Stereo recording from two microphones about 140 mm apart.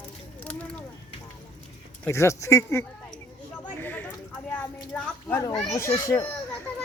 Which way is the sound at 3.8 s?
15° left (ahead or behind).